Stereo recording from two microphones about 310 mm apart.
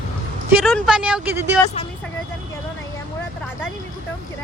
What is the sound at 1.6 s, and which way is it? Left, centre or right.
Speech, centre.